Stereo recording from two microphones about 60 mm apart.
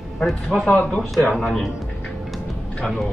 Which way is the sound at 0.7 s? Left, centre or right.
Centre.